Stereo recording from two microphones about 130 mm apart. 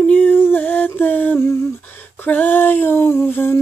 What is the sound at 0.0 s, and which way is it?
Humming, 10° left (ahead or behind).